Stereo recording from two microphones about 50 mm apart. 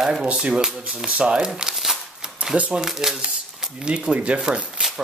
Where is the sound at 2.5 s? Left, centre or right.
Right.